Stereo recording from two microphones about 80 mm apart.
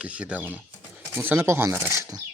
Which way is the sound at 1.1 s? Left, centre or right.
Right.